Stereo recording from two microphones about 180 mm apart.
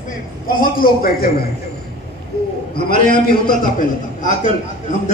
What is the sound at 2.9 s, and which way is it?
Speech, 55° left (ahead or behind).